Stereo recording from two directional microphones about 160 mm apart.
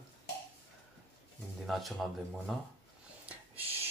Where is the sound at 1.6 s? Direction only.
Centre (ahead or behind).